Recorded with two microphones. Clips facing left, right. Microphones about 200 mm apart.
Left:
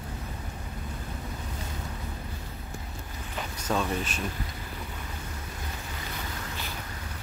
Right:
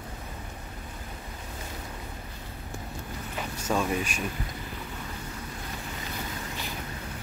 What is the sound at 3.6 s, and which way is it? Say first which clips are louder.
Speech: right 1 dB; 10° right (ahead or behind).